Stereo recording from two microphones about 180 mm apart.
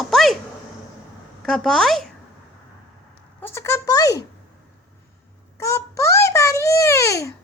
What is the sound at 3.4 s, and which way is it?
Speech, 15° left (ahead or behind).